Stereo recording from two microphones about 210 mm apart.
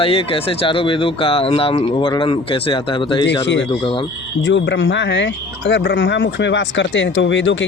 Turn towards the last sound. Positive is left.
turn(degrees=60)  # may be behind; listen again after turning